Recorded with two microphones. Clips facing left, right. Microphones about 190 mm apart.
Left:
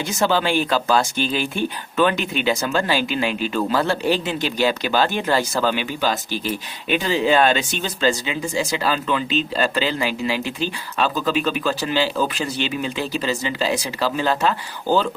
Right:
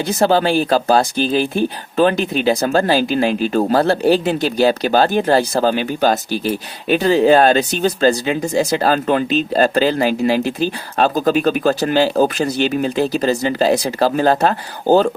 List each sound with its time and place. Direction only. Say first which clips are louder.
0.0 s speech: right 5 dB; 35° right (ahead or behind)